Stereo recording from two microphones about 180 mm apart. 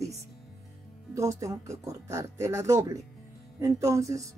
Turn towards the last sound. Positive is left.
turn(degrees=-15)  # may be behind; listen again after turning